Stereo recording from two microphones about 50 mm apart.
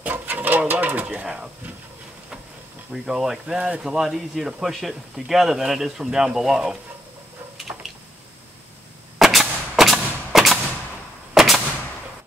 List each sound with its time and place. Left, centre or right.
0.0 s sewing machine: right
1.2 s speech: centre
2.9 s speech: centre
9.2 s a sound: centre
11.3 s gunshot: centre